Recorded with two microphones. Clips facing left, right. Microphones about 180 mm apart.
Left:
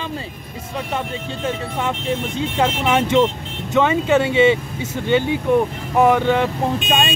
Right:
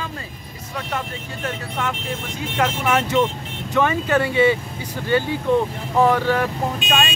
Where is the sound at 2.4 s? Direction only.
25° left (ahead or behind).